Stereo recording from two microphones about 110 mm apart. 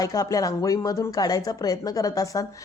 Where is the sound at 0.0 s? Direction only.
35° left (ahead or behind).